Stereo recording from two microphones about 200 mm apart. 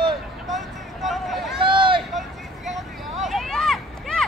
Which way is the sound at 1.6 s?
25° right (ahead or behind).